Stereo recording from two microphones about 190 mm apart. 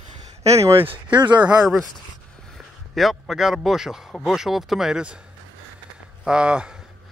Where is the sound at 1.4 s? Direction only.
5° right (ahead or behind).